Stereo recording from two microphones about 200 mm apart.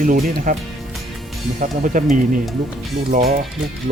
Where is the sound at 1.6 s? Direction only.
40° right (ahead or behind).